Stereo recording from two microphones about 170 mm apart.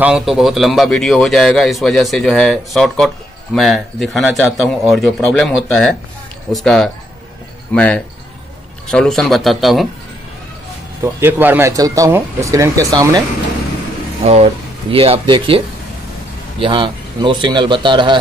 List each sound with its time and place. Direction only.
0.0 s a man's voice: 5° right (ahead or behind)
11.1 s speech: 15° right (ahead or behind)
14.2 s a man's voice: 35° right (ahead or behind)